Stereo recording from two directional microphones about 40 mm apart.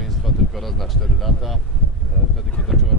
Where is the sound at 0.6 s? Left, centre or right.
Centre.